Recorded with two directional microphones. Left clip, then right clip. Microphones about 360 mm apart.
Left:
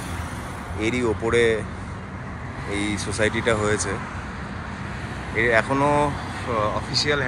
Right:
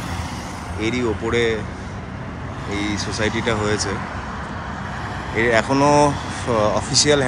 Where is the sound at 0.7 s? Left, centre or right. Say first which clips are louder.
Right 1 dB; centre.